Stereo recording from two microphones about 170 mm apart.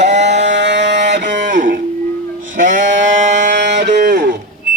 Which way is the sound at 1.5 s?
50° right (ahead or behind).